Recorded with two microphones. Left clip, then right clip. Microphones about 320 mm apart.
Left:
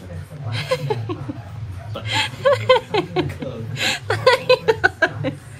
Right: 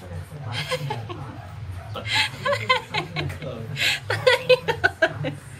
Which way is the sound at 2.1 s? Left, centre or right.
Centre.